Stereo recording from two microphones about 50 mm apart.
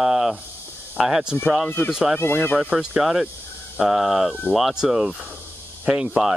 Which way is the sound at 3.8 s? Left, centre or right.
Centre.